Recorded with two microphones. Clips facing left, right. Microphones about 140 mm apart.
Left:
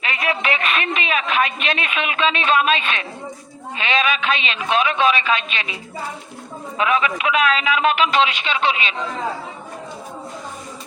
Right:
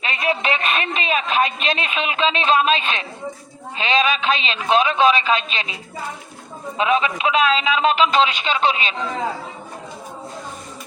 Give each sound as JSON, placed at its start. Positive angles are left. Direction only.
{"t": 0.0, "sound": "a woman's voice", "side_deg": -35}
{"t": 6.7, "sound": "a man's voice", "side_deg": -30}